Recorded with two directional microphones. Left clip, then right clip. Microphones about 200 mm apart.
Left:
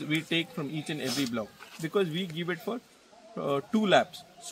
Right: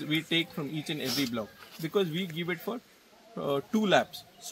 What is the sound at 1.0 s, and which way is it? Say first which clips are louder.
Speech: even; 20° left (ahead or behind).